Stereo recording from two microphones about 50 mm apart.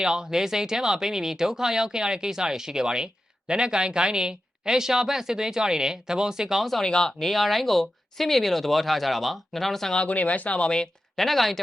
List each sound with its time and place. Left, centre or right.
0.0 s speech: centre
6.8 s speech: centre
9.9 s speech: left
11.2 s speech: centre